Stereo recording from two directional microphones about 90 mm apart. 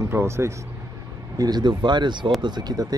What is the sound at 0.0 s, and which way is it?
Speech, 30° right (ahead or behind).